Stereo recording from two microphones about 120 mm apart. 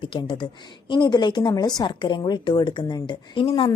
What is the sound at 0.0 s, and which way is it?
A woman's voice, 45° left (ahead or behind).